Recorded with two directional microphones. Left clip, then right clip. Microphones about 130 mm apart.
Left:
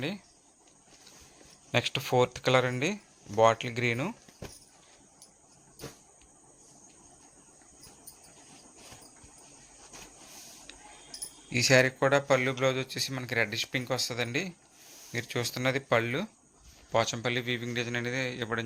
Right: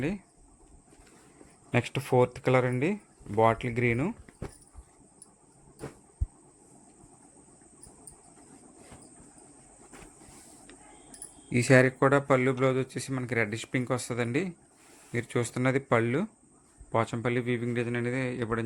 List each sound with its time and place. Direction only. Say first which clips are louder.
1.7 s speech: even; 30° right (ahead or behind)
11.4 s speech: right 1 dB; 40° right (ahead or behind)
16.9 s speech: even; 30° right (ahead or behind)